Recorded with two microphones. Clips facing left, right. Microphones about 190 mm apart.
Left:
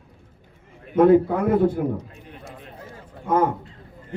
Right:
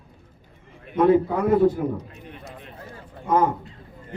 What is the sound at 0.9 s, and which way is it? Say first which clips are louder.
Speech: left 3 dB; 55° left (ahead or behind).